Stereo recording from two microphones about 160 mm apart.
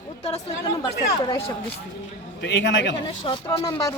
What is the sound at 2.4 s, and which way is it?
Speech, 90° left.